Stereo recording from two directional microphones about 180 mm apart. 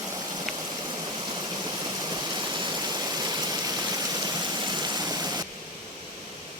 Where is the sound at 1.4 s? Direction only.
25° right (ahead or behind).